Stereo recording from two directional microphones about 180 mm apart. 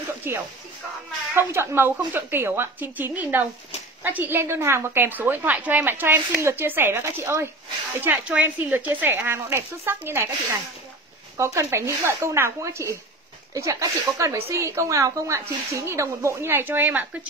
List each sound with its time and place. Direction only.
0.3 s a woman's voice: 10° right (ahead or behind)
11.3 s a woman's voice: 15° right (ahead or behind)